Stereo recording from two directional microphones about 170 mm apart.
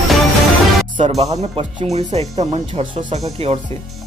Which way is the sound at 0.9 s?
40° right (ahead or behind).